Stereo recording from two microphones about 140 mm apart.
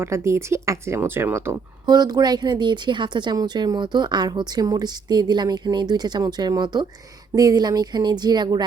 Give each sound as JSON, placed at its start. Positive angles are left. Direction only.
{"t": 0.0, "sound": "speech", "side_deg": -20}